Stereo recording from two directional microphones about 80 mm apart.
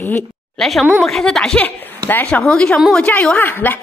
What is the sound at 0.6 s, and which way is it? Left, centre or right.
Speech, centre.